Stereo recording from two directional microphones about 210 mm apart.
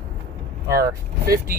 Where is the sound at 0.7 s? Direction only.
15° right (ahead or behind).